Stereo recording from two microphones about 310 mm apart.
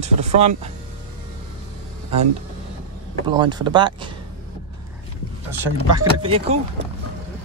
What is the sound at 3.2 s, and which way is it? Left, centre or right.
Speech, centre.